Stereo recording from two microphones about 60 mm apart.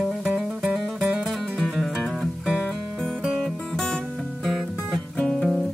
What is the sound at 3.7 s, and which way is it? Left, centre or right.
Music, centre.